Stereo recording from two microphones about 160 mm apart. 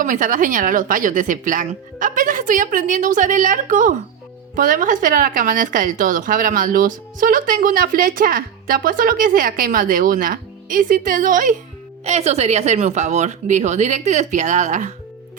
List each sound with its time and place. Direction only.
0.0 s a woman's voice: 55° right (ahead or behind)
12.0 s speech: 40° right (ahead or behind)